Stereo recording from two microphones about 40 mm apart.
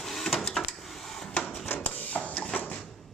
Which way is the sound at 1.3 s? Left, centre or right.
Left.